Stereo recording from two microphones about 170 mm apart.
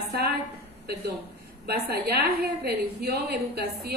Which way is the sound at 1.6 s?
70° right (ahead or behind).